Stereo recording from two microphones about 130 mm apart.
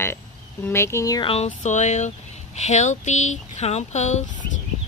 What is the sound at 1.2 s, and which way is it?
Speech, 50° left (ahead or behind).